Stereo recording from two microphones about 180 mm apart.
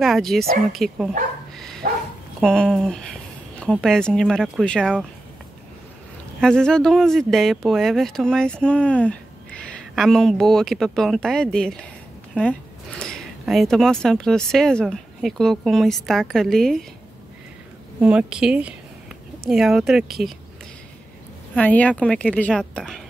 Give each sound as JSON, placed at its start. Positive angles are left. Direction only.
{"t": 0.0, "sound": "speech", "side_deg": 0}
{"t": 1.8, "sound": "bow-wow", "side_deg": -50}
{"t": 2.4, "sound": "a sound", "side_deg": 5}
{"t": 3.7, "sound": "speech", "side_deg": 0}
{"t": 6.4, "sound": "speech", "side_deg": 5}
{"t": 18.0, "sound": "speech", "side_deg": -5}
{"t": 21.5, "sound": "speech", "side_deg": 10}